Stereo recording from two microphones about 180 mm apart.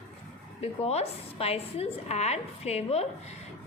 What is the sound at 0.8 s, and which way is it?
A woman's voice, 35° left (ahead or behind).